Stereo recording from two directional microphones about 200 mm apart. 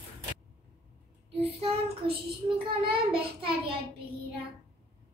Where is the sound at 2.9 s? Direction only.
25° right (ahead or behind).